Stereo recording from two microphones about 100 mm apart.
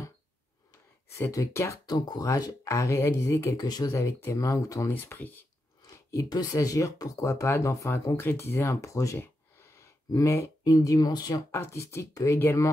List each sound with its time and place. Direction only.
1.1 s speech: 30° left (ahead or behind)
1.9 s speech: 40° left (ahead or behind)
3.5 s speech: 40° left (ahead or behind)
3.9 s speech: 30° left (ahead or behind)
4.9 s speech: 20° left (ahead or behind)
6.1 s speech: 40° left (ahead or behind)
9.8 s a sound: 30° left (ahead or behind)
10.6 s speech: 35° left (ahead or behind)
11.5 s speech: 25° left (ahead or behind)